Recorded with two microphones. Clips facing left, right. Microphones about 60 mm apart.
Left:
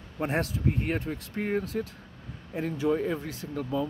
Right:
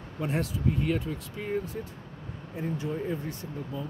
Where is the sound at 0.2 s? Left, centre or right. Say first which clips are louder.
Left 2 dB; left.